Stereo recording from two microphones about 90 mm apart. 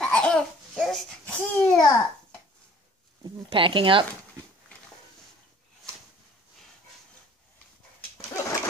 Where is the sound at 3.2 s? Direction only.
70° right (ahead or behind).